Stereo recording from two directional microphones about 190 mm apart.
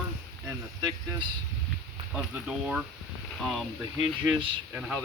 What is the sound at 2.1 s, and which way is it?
Speech, 5° right (ahead or behind).